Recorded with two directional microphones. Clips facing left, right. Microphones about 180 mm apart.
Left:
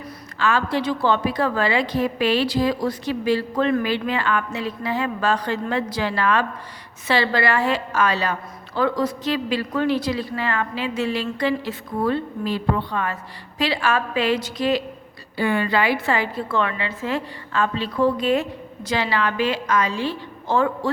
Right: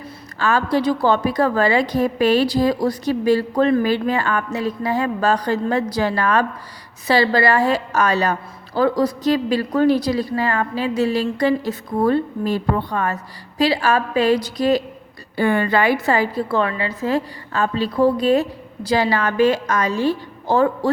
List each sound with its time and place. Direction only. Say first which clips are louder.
0.3 s a woman's voice: right 3 dB; 40° right (ahead or behind)
15.4 s a woman's voice: right 3 dB; 50° right (ahead or behind)